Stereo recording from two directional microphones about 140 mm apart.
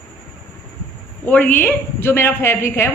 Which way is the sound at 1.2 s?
10° left (ahead or behind).